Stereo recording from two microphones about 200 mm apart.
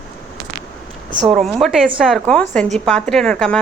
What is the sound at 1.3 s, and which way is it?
A woman's voice, centre (ahead or behind).